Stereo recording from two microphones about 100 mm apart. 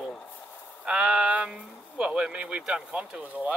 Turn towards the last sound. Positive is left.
turn(degrees=-15)  # may be behind; listen again after turning